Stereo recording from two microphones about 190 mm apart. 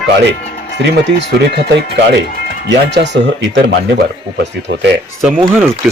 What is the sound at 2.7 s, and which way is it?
Speech, 65° right (ahead or behind).